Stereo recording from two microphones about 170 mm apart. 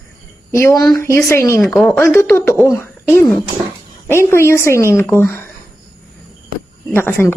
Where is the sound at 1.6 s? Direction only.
Centre (ahead or behind).